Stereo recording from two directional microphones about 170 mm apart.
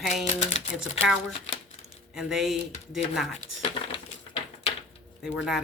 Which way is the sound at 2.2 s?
5° right (ahead or behind).